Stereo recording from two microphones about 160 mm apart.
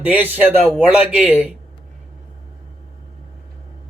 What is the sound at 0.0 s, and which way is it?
Speech, 10° right (ahead or behind).